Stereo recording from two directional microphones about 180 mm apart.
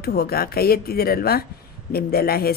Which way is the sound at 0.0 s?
60° left (ahead or behind).